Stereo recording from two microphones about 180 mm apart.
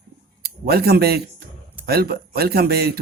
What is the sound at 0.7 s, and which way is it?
Speech, 60° right (ahead or behind).